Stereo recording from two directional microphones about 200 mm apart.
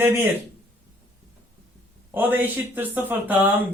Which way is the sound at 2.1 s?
10° right (ahead or behind).